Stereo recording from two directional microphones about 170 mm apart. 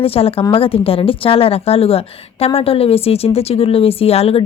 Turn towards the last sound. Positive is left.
turn(degrees=35)  # may be behind; listen again after turning